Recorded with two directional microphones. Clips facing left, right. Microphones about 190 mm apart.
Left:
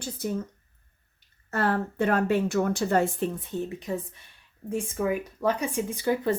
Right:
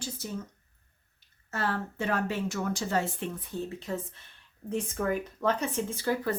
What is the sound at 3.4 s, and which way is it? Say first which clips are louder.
Speech: left 4 dB; 20° left (ahead or behind).